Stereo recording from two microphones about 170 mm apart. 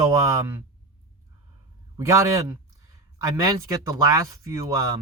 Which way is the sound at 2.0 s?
15° right (ahead or behind).